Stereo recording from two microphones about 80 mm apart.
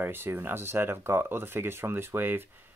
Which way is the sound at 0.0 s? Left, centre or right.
Right.